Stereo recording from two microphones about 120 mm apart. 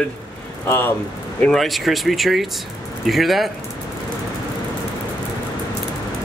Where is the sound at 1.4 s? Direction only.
Centre (ahead or behind).